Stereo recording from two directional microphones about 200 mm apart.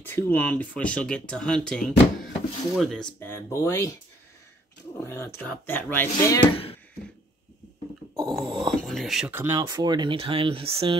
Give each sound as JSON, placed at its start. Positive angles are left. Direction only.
{"t": 0.0, "sound": "speech", "side_deg": 10}
{"t": 3.2, "sound": "speech", "side_deg": 10}
{"t": 4.9, "sound": "speech", "side_deg": 10}
{"t": 8.2, "sound": "speech", "side_deg": 0}